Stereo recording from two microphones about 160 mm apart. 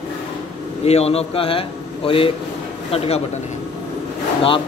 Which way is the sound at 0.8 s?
40° left (ahead or behind).